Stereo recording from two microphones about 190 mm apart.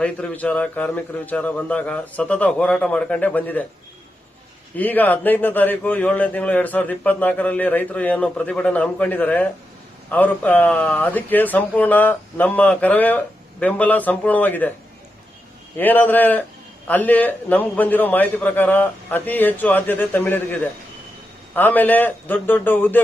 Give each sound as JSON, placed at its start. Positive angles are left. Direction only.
{"t": 0.0, "sound": "a man's voice", "side_deg": 5}
{"t": 4.8, "sound": "a man's voice", "side_deg": 10}
{"t": 15.8, "sound": "a man's voice", "side_deg": 10}